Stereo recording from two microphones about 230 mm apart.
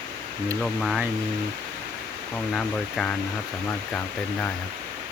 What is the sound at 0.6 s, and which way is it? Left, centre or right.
Speech, centre.